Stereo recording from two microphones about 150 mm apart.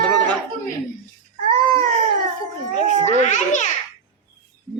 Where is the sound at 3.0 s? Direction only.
55° left (ahead or behind).